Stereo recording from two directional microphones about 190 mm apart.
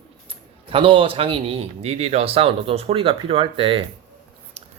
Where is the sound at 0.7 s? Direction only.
25° right (ahead or behind).